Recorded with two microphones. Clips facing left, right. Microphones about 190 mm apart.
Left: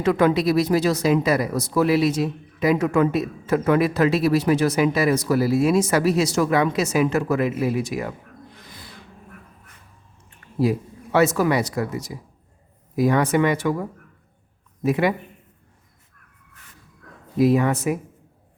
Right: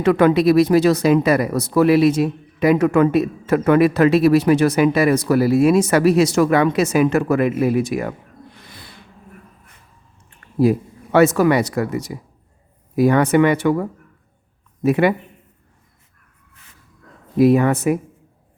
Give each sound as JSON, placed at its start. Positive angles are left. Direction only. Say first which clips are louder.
{"t": 0.0, "sound": "speech", "louder": "right 5 dB", "side_deg": -65}
{"t": 10.6, "sound": "speech", "louder": "right 5 dB", "side_deg": -55}
{"t": 13.0, "sound": "speech", "louder": "right 5 dB", "side_deg": -60}
{"t": 14.8, "sound": "speech", "louder": "right 4 dB", "side_deg": -60}
{"t": 17.3, "sound": "speech", "louder": "right 4 dB", "side_deg": -60}